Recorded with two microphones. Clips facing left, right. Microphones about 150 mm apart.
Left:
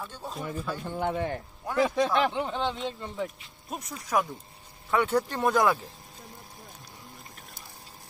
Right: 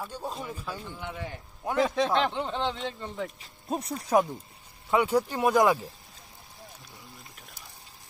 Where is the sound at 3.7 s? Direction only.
30° right (ahead or behind).